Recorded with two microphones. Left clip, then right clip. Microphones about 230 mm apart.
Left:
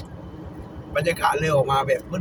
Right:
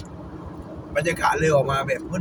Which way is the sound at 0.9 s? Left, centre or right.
Centre.